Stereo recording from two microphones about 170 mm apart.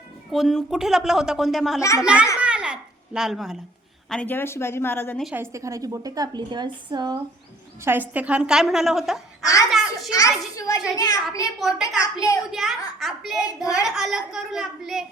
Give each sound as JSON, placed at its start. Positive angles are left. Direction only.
{"t": 0.3, "sound": "speech", "side_deg": 0}
{"t": 2.4, "sound": "babbling", "side_deg": -5}
{"t": 4.1, "sound": "speech", "side_deg": 10}
{"t": 5.2, "sound": "a woman's voice", "side_deg": -10}
{"t": 7.9, "sound": "speech", "side_deg": -10}
{"t": 9.4, "sound": "a sound", "side_deg": 20}
{"t": 9.6, "sound": "a sound", "side_deg": -5}
{"t": 10.1, "sound": "a child's voice", "side_deg": 20}
{"t": 10.6, "sound": "a sound", "side_deg": 20}
{"t": 10.9, "sound": "a child's voice", "side_deg": 20}
{"t": 11.6, "sound": "speech", "side_deg": 0}